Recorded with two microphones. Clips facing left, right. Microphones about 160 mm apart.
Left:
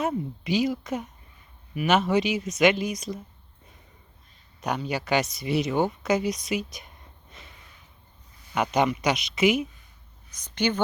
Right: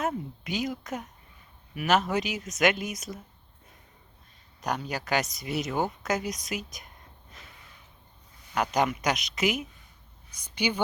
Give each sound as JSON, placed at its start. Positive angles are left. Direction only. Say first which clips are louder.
{"t": 0.0, "sound": "speech", "louder": "left 3 dB", "side_deg": 0}
{"t": 4.6, "sound": "speech", "louder": "left 3 dB", "side_deg": 0}
{"t": 6.2, "sound": "speech", "louder": "left 6 dB", "side_deg": -45}
{"t": 8.5, "sound": "speech", "louder": "left 3 dB", "side_deg": 5}
{"t": 10.3, "sound": "a woman's voice", "louder": "left 3 dB", "side_deg": -10}